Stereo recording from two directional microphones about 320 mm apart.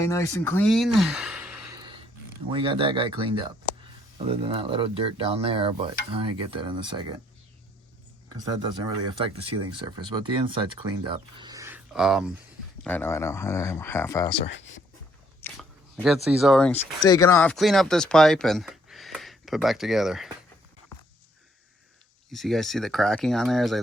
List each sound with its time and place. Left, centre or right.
0.0 s speech: centre
9.2 s speech: centre
22.3 s speech: centre